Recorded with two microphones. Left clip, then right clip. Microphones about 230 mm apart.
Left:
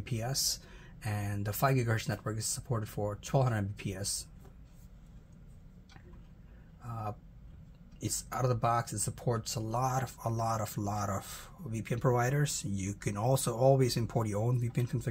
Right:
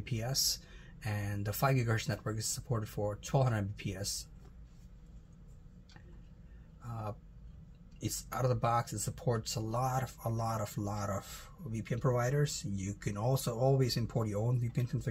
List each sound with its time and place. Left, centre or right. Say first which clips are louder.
0.0 s speech: even; centre
6.8 s speech: left 3 dB; centre